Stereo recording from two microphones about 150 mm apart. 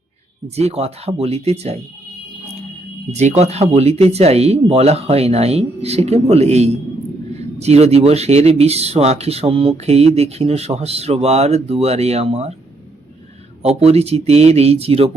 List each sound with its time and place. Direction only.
0.5 s speech: 45° right (ahead or behind)
3.1 s speech: 50° right (ahead or behind)
13.6 s speech: 45° right (ahead or behind)